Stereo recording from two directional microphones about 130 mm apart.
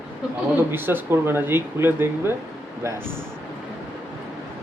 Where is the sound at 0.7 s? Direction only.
15° right (ahead or behind).